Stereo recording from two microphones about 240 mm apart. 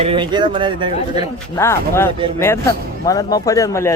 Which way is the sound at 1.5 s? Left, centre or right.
Centre.